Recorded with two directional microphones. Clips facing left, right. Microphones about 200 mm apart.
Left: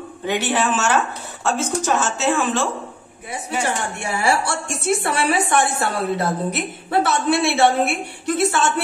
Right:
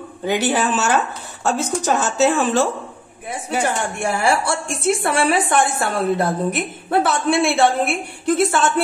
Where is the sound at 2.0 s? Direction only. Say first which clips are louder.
Right 3 dB; 35° right (ahead or behind).